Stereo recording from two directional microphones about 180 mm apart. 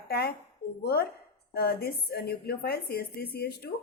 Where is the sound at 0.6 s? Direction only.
60° left (ahead or behind).